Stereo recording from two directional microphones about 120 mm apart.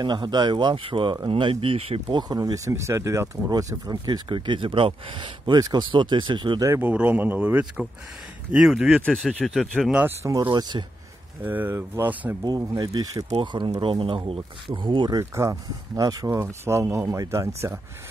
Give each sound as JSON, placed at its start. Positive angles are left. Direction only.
{"t": 0.0, "sound": "speech", "side_deg": -40}
{"t": 2.1, "sound": "speech", "side_deg": -35}
{"t": 6.6, "sound": "speech", "side_deg": -20}
{"t": 10.0, "sound": "speech", "side_deg": -25}
{"t": 10.4, "sound": "speech", "side_deg": -40}
{"t": 11.4, "sound": "speech", "side_deg": -15}
{"t": 12.4, "sound": "speech", "side_deg": -35}
{"t": 15.1, "sound": "speech", "side_deg": -25}